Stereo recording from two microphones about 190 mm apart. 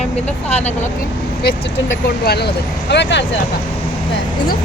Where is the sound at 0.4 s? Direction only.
35° left (ahead or behind).